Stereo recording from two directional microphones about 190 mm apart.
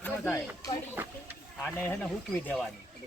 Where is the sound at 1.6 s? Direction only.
5° left (ahead or behind).